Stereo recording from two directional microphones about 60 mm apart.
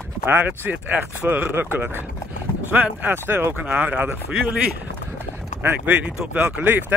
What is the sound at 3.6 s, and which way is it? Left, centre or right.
Speech, right.